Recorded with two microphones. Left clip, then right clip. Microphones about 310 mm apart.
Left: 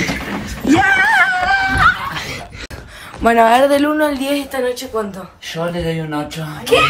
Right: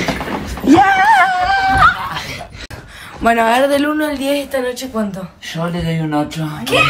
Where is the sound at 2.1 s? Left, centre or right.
Centre.